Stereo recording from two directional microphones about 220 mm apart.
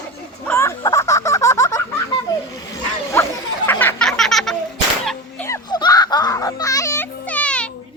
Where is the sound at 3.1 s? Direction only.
10° left (ahead or behind).